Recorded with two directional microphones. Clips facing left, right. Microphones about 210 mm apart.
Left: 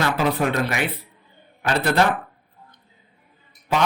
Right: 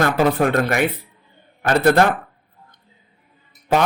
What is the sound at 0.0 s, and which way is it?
A man's voice, 50° right (ahead or behind).